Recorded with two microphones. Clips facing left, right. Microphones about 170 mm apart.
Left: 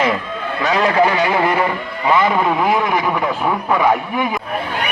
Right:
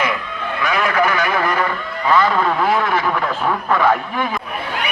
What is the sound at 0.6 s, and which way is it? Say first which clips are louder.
A man's voice: left 3 dB; 30° left (ahead or behind).